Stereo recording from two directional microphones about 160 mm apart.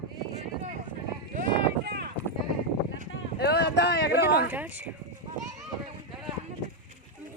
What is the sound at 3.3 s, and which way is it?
Speech, 90° left.